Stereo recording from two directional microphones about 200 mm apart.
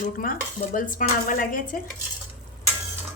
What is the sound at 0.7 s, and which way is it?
Speech, 40° left (ahead or behind).